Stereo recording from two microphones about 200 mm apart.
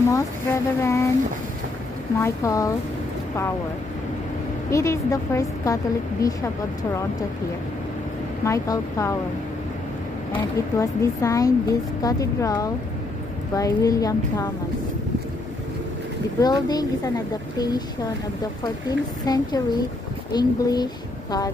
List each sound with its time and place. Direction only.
0.0 s speech: 15° left (ahead or behind)
2.2 s speech: 15° left (ahead or behind)
4.6 s speech: 15° left (ahead or behind)
8.5 s speech: 15° left (ahead or behind)
10.8 s speech: 15° left (ahead or behind)
16.3 s a woman's voice: 20° left (ahead or behind)